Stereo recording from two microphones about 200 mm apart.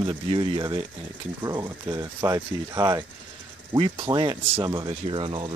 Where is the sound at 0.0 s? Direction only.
25° right (ahead or behind).